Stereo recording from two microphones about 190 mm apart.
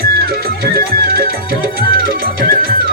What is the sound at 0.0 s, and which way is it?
Music, 55° right (ahead or behind).